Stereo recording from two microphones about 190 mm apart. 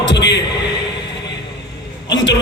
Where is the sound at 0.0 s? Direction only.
65° left (ahead or behind).